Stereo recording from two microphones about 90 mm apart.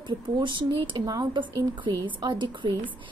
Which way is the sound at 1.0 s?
55° right (ahead or behind).